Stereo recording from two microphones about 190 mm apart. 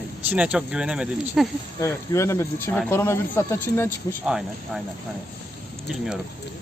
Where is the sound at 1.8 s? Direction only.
15° left (ahead or behind).